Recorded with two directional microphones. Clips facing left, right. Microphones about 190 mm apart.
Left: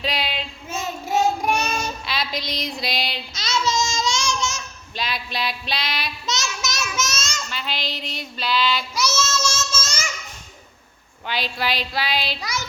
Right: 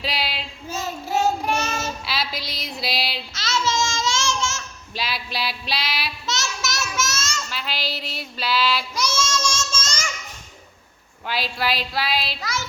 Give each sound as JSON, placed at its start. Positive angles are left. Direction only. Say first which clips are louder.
{"t": 0.0, "sound": "child singing", "louder": "left 2 dB", "side_deg": -5}
{"t": 1.4, "sound": "child singing", "louder": "left 2 dB", "side_deg": 15}
{"t": 2.0, "sound": "a sound", "louder": "left 1 dB", "side_deg": -5}
{"t": 3.3, "sound": "babbling", "louder": "left 1 dB", "side_deg": 15}
{"t": 4.9, "sound": "a sound", "louder": "left 1 dB", "side_deg": -5}
{"t": 6.2, "sound": "a sound", "louder": "left 1 dB", "side_deg": 15}
{"t": 7.5, "sound": "child singing", "louder": "left 1 dB", "side_deg": 0}
{"t": 11.3, "sound": "speech", "louder": "right 1 dB", "side_deg": 0}
{"t": 12.4, "sound": "child singing", "louder": "even", "side_deg": 15}